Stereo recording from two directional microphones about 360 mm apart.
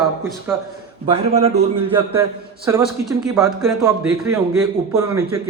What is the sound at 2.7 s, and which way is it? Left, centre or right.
Speech, centre.